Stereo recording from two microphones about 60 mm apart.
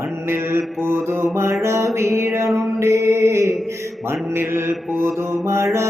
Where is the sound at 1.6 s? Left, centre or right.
Right.